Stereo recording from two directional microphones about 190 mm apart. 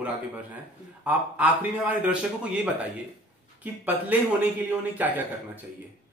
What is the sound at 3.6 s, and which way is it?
Speech, 10° right (ahead or behind).